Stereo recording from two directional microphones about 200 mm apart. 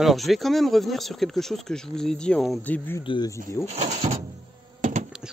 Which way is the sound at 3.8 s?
35° right (ahead or behind).